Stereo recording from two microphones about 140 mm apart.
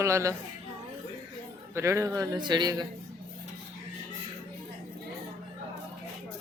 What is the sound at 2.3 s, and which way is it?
Speech, 30° right (ahead or behind).